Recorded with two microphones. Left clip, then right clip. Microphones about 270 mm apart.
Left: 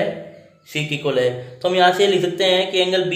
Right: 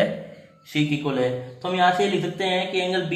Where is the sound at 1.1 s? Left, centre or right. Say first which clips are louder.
Left 5 dB; centre.